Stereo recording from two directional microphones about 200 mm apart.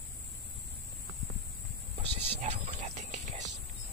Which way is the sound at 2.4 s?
35° right (ahead or behind).